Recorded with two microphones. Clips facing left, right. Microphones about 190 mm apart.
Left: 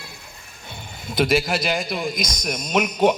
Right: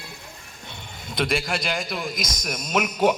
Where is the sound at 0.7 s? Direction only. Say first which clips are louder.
Left 4 dB; 5° left (ahead or behind).